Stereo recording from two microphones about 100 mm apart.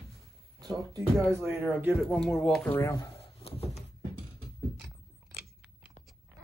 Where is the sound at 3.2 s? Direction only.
75° left (ahead or behind).